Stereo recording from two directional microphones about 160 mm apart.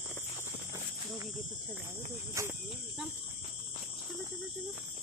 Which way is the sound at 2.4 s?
20° right (ahead or behind).